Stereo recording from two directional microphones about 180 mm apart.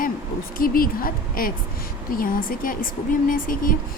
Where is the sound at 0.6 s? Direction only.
55° left (ahead or behind).